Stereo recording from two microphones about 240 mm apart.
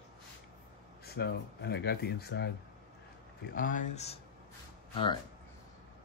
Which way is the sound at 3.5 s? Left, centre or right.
Left.